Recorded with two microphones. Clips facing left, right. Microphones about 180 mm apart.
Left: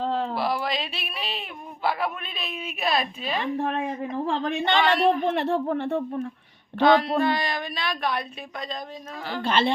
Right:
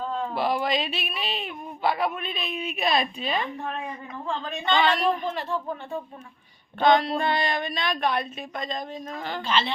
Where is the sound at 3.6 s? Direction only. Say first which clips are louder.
Left 6 dB; 75° left (ahead or behind).